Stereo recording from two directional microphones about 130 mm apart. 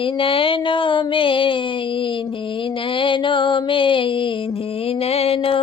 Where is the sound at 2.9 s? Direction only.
40° left (ahead or behind).